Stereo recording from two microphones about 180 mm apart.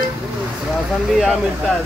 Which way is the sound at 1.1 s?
Centre (ahead or behind).